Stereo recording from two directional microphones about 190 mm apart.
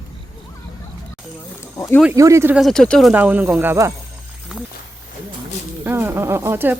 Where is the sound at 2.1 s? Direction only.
15° right (ahead or behind).